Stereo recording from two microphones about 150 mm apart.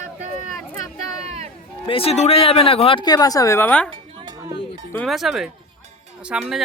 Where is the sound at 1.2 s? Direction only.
45° right (ahead or behind).